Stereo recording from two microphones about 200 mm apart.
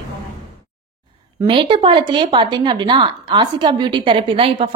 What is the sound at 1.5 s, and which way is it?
Speech, 25° right (ahead or behind).